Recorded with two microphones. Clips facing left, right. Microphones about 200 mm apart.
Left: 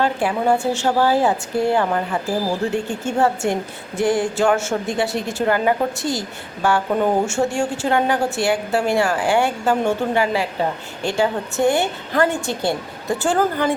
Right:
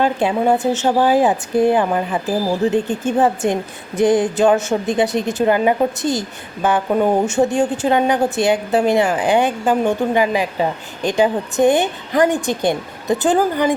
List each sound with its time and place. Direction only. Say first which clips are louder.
0.0 s a woman's voice: right 3 dB; 20° right (ahead or behind)